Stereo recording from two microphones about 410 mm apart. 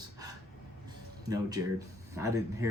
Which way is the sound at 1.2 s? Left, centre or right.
Centre.